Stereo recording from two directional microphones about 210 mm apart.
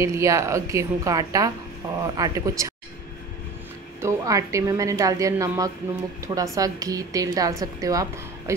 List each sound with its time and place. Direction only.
0.0 s a woman's voice: 15° right (ahead or behind)
4.0 s a woman's voice: 15° right (ahead or behind)